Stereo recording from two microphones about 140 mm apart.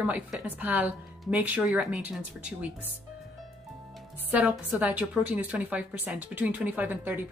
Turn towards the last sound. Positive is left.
turn(degrees=-15)  # may be behind; listen again after turning